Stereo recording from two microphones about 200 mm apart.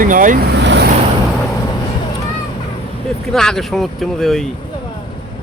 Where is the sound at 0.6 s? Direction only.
60° right (ahead or behind).